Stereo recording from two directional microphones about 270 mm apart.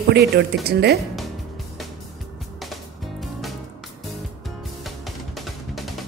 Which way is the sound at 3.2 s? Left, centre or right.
Centre.